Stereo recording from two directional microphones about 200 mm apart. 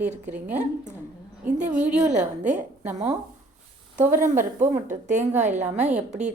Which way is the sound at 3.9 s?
40° right (ahead or behind).